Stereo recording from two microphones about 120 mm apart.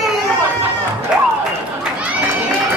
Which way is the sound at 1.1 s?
5° right (ahead or behind).